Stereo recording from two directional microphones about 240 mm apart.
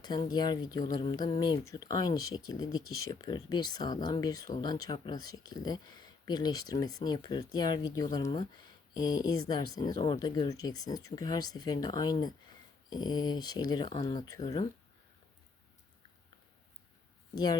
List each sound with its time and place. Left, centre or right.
0.0 s speech: centre
17.3 s speech: centre